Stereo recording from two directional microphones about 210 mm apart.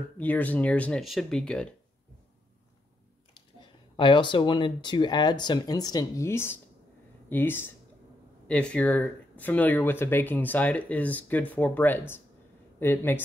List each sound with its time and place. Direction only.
0.2 s speech: 5° left (ahead or behind)
3.9 s speech: 20° left (ahead or behind)